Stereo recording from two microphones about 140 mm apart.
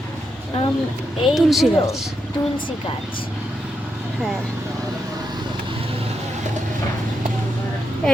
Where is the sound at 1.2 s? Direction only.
Centre (ahead or behind).